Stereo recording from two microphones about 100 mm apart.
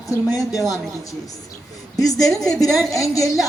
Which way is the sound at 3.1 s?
35° left (ahead or behind).